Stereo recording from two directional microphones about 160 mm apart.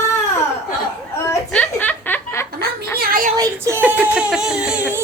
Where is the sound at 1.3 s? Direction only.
10° left (ahead or behind).